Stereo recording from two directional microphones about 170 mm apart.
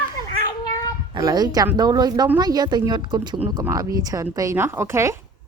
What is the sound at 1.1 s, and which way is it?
A woman's voice, 25° right (ahead or behind).